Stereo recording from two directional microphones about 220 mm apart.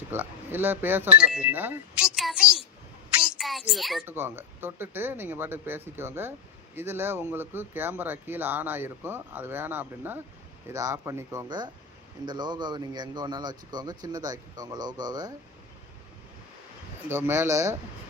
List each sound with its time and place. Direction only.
0.1 s speech: 10° right (ahead or behind)
17.1 s speech: 10° right (ahead or behind)